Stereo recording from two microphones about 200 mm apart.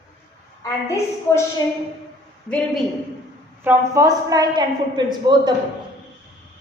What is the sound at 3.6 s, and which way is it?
A man's voice, 15° right (ahead or behind).